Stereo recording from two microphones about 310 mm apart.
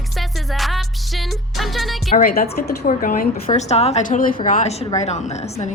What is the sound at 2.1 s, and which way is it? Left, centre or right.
A woman's voice, left.